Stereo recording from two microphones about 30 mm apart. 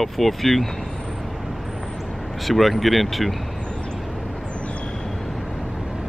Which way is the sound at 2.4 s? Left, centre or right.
Centre.